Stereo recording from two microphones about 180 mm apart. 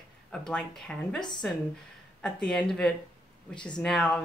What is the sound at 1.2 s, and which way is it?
Speech, 25° left (ahead or behind).